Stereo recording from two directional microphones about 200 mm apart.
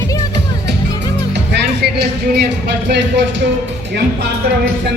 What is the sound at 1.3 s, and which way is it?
Speech, 60° right (ahead or behind).